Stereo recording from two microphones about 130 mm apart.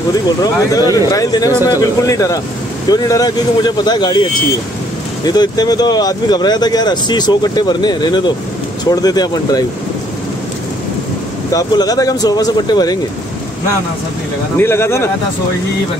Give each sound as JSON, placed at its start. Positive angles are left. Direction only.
{"t": 0.4, "sound": "speech", "side_deg": 30}
{"t": 11.5, "sound": "speech", "side_deg": 30}
{"t": 14.6, "sound": "speech", "side_deg": 20}